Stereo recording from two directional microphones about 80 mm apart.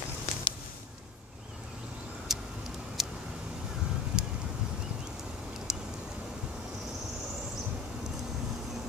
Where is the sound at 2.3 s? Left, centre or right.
Centre.